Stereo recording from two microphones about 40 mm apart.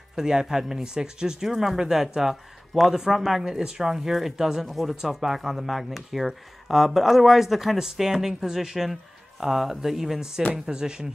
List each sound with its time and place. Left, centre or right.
0.1 s speech: centre
1.5 s speech: centre
3.5 s speech: centre